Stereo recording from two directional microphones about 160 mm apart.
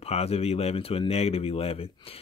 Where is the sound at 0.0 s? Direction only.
40° left (ahead or behind).